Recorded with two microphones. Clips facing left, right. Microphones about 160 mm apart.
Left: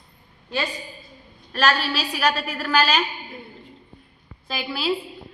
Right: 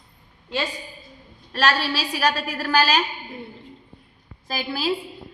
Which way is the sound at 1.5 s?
35° right (ahead or behind).